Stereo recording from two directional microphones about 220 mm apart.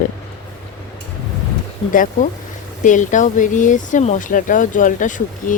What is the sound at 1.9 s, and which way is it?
Speech, 35° left (ahead or behind).